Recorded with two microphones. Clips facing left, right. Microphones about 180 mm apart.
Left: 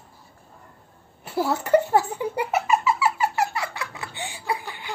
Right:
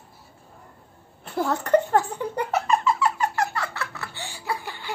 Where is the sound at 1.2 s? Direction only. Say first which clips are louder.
Left 1 dB; 5° left (ahead or behind).